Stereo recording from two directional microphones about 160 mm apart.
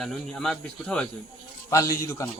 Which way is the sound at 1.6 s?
20° left (ahead or behind).